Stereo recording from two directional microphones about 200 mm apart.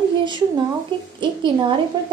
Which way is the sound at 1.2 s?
25° right (ahead or behind).